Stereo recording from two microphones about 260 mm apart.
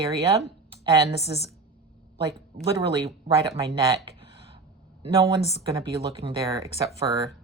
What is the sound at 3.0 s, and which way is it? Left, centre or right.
Speech, centre.